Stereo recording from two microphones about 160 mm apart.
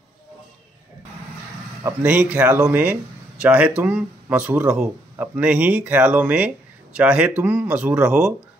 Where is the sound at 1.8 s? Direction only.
10° right (ahead or behind).